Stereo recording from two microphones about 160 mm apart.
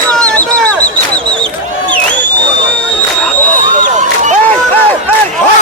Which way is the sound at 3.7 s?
50° right (ahead or behind).